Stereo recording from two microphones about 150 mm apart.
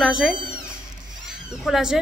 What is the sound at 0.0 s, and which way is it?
A woman's voice, centre (ahead or behind).